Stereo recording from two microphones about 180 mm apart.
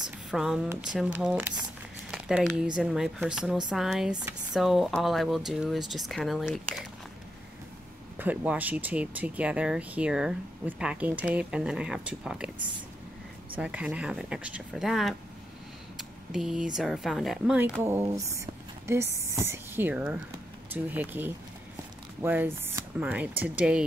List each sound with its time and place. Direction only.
0.0 s a sound: centre (ahead or behind)
0.7 s speech: 5° right (ahead or behind)
4.1 s speech: 20° right (ahead or behind)
4.6 s speech: centre (ahead or behind)
8.2 s speech: 10° right (ahead or behind)
13.6 s speech: 5° right (ahead or behind)
16.0 s a sound: centre (ahead or behind)
16.7 s speech: 5° right (ahead or behind)